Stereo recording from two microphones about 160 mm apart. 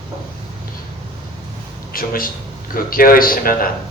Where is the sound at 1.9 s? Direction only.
65° left (ahead or behind).